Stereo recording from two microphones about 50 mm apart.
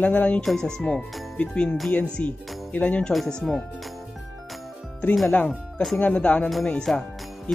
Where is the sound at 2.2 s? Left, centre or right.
Left.